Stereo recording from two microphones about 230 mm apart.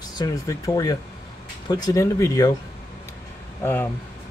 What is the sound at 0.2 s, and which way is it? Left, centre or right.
Speech, centre.